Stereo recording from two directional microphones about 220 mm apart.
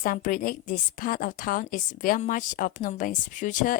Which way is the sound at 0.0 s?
40° left (ahead or behind).